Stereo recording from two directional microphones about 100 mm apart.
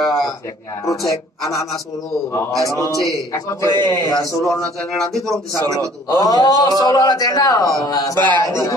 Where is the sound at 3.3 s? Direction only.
35° left (ahead or behind).